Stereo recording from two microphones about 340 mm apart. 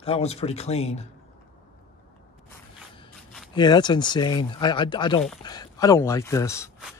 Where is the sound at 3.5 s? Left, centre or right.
Centre.